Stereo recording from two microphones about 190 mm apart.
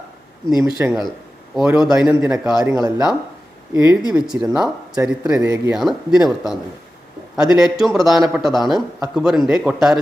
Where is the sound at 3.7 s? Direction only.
5° right (ahead or behind).